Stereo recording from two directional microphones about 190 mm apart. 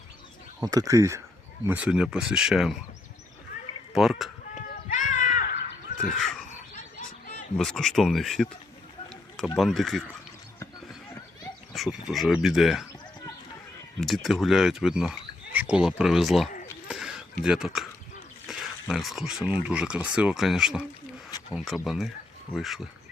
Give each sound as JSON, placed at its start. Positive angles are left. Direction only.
{"t": 0.6, "sound": "speech", "side_deg": -20}
{"t": 3.9, "sound": "speech", "side_deg": 0}
{"t": 4.5, "sound": "a sound", "side_deg": 40}
{"t": 7.5, "sound": "speech", "side_deg": 5}
{"t": 9.6, "sound": "speech", "side_deg": 0}
{"t": 11.7, "sound": "speech", "side_deg": 0}
{"t": 14.0, "sound": "speech", "side_deg": 0}
{"t": 16.9, "sound": "a sound", "side_deg": 0}
{"t": 19.6, "sound": "speech", "side_deg": -5}